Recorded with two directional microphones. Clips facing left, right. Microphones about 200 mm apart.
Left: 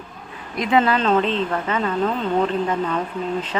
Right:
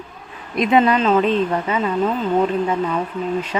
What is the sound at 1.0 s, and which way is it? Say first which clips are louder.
A woman's voice: right 3 dB; 5° right (ahead or behind).